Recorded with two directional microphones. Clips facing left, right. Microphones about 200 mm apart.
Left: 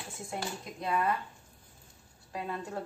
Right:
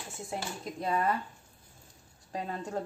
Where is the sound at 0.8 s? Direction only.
35° right (ahead or behind).